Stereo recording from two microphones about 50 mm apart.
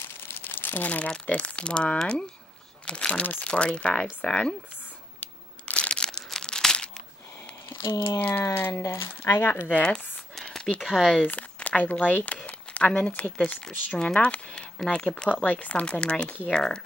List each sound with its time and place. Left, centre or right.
0.0 s crumpling: left
0.8 s speech: left
5.7 s crumpling: left
7.7 s speech: left
8.5 s speech: left
8.8 s speech: left
9.7 s speech: left
9.9 s a sound: centre
10.8 s speech: centre
11.2 s speech: left
13.9 s speech: centre
15.4 s speech: left; by 16.8 s centre